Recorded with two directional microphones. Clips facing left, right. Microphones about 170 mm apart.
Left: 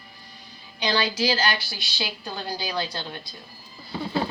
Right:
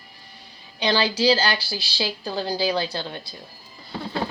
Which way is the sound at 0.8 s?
30° right (ahead or behind).